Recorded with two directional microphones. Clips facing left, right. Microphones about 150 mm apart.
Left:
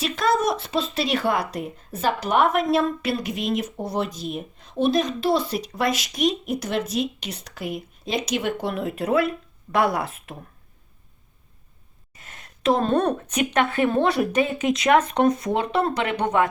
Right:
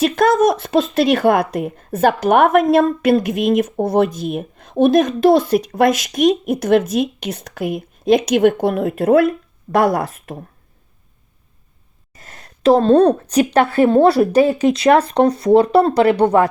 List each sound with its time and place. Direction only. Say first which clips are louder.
0.0 s speech: right 8 dB; 50° right (ahead or behind)
12.1 s speech: right 5 dB; 35° right (ahead or behind)